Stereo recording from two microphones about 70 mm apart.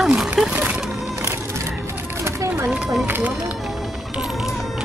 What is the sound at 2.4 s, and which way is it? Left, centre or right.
Run, right.